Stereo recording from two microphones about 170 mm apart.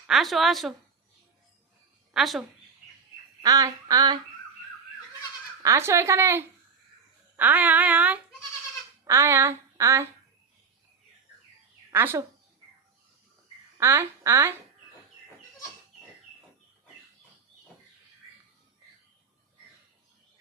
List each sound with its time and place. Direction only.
0.1 s a woman's voice: centre (ahead or behind)
2.1 s a woman's voice: centre (ahead or behind)
3.4 s a sound: 20° right (ahead or behind)
5.6 s speech: 15° right (ahead or behind)
9.0 s a sound: 15° right (ahead or behind)
11.9 s speech: 15° right (ahead or behind)
13.7 s speech: 15° right (ahead or behind)